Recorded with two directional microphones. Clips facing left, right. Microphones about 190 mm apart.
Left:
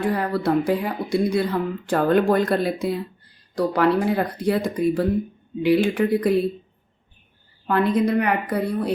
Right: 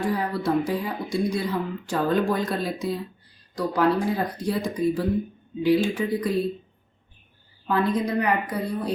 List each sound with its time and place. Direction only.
0.0 s a woman's voice: 60° left (ahead or behind)
7.7 s speech: 60° left (ahead or behind)